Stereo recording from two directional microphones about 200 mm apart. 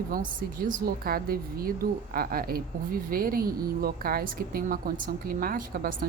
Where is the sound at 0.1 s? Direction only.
45° right (ahead or behind).